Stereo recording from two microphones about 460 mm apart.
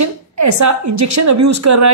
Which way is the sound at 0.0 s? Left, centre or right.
Right.